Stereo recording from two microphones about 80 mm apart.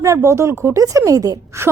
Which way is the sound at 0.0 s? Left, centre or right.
Right.